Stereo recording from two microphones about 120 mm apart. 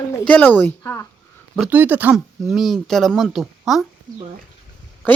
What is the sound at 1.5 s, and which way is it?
Speech, 10° right (ahead or behind).